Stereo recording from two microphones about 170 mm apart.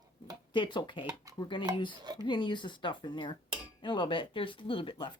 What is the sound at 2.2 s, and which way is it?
Speech, 25° left (ahead or behind).